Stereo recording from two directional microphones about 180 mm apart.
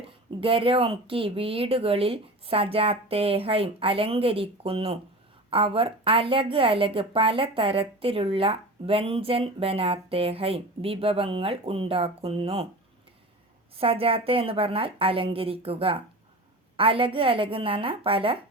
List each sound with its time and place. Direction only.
0.0 s a woman's voice: 30° right (ahead or behind)
13.7 s a woman's voice: 30° right (ahead or behind)